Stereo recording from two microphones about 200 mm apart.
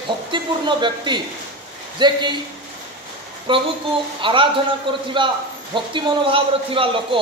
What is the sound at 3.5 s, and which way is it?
A man's voice, 25° right (ahead or behind).